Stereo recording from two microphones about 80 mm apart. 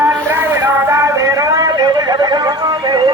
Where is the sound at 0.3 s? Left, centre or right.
Right.